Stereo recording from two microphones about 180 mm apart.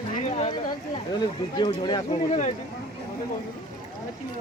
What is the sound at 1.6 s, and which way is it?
Speech, 25° left (ahead or behind).